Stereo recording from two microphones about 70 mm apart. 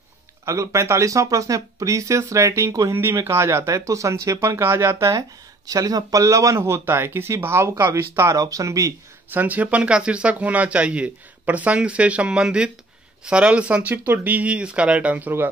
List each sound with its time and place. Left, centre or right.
0.5 s speech: right
5.7 s speech: right
9.3 s speech: right